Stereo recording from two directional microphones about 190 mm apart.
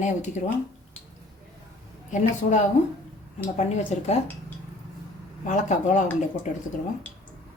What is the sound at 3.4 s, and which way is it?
Speech, 35° left (ahead or behind).